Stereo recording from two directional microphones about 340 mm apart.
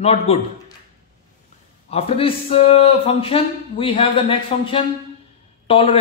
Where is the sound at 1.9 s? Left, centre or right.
Centre.